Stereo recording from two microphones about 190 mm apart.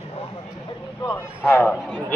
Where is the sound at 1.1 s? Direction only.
10° left (ahead or behind).